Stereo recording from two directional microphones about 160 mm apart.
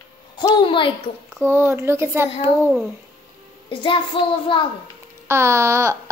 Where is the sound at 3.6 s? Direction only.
30° left (ahead or behind).